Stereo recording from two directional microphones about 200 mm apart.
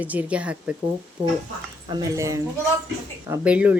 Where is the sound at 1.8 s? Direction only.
20° right (ahead or behind).